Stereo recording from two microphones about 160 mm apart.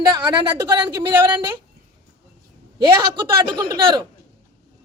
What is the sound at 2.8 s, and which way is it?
A woman's voice, 25° right (ahead or behind).